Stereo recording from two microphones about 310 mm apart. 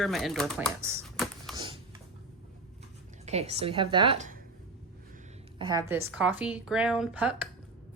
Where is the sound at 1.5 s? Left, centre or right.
Centre.